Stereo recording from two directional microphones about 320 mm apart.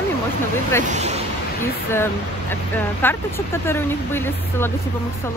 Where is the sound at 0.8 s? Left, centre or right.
Right.